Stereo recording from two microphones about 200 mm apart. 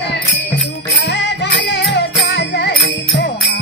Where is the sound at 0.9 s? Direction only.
60° left (ahead or behind).